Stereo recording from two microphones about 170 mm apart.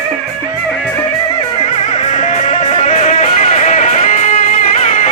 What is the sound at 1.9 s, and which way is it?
Music, 40° left (ahead or behind).